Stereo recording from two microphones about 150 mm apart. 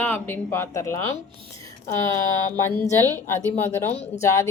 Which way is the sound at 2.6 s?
15° left (ahead or behind).